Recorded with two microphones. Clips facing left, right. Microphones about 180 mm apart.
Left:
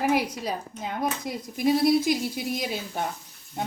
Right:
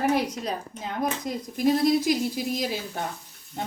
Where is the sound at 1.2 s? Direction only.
Centre (ahead or behind).